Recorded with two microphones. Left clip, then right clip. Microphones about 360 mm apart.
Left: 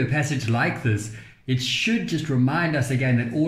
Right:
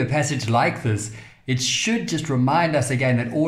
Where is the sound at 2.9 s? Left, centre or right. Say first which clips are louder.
Right 3 dB; right.